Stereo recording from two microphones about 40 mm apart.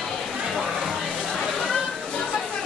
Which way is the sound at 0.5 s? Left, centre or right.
Centre.